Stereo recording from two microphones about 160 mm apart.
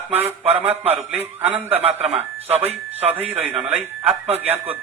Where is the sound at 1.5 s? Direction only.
40° right (ahead or behind).